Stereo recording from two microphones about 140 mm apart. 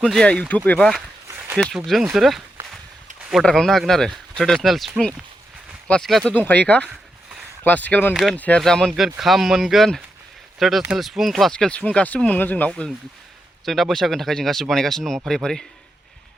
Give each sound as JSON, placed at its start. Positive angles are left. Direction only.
{"t": 0.0, "sound": "speech", "side_deg": 5}
{"t": 1.3, "sound": "a sound", "side_deg": -15}
{"t": 1.5, "sound": "speech", "side_deg": 0}
{"t": 8.1, "sound": "speech", "side_deg": 0}